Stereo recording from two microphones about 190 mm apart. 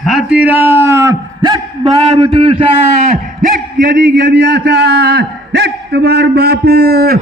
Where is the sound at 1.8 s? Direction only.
30° right (ahead or behind).